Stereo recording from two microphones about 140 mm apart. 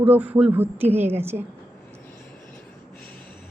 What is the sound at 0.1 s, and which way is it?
A woman's voice, 10° right (ahead or behind).